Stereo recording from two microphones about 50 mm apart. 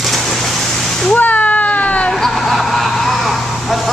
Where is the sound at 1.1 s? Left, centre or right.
Left.